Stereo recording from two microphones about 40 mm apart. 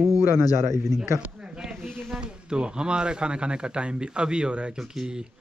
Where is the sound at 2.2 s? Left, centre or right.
Right.